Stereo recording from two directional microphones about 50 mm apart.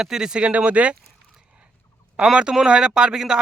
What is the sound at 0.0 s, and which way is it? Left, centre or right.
Speech, centre.